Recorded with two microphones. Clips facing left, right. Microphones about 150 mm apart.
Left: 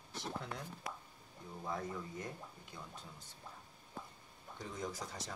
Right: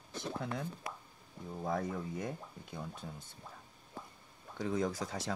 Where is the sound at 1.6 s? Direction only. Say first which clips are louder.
Right 6 dB; 60° right (ahead or behind).